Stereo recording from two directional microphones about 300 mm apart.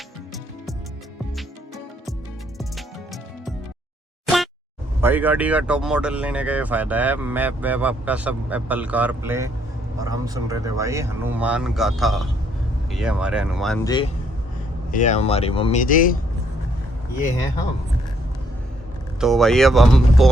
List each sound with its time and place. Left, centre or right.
1.4 s music: centre
4.9 s speech: centre
13.8 s speech: centre
14.8 s speech: left
19.2 s speech: centre